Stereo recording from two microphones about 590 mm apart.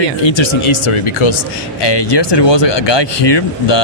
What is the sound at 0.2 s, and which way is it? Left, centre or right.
Speech, left.